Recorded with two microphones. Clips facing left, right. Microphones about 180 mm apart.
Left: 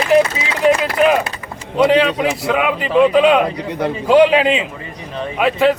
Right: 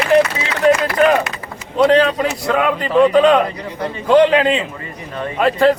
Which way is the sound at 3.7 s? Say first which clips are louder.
Left 4 dB; 65° left (ahead or behind).